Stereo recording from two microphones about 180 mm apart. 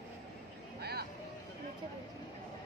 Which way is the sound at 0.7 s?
60° right (ahead or behind).